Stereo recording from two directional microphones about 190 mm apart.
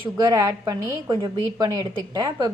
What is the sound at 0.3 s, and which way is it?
A woman's voice, 20° right (ahead or behind).